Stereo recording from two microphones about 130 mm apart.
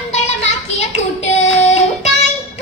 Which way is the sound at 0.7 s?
65° left (ahead or behind).